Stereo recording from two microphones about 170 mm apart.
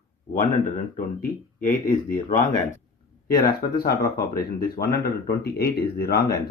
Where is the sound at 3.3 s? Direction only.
65° left (ahead or behind).